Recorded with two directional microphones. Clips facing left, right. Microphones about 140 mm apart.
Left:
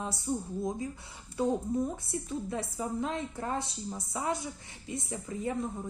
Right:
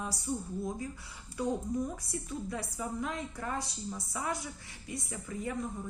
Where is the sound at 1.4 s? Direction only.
25° left (ahead or behind).